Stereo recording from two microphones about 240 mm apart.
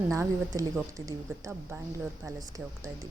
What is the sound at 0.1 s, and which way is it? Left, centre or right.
Speech, centre.